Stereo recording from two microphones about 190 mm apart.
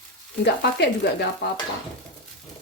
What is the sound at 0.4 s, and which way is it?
Frying, 60° left (ahead or behind).